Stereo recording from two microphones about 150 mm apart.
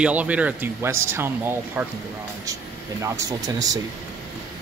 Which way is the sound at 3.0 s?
25° right (ahead or behind).